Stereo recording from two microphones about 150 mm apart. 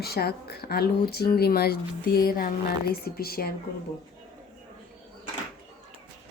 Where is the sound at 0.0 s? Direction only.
90° left.